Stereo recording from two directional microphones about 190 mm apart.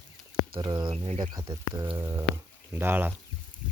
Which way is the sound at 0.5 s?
25° right (ahead or behind).